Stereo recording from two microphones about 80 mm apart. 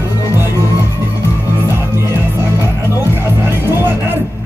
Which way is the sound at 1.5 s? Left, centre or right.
Right.